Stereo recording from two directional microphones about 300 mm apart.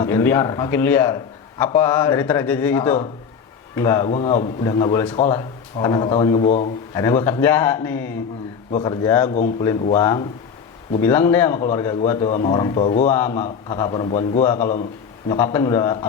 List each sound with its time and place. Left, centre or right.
0.0 s a man's voice: centre
13.1 s a man's voice: centre